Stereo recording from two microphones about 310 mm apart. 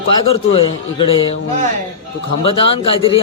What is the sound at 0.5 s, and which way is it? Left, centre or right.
Speech, centre.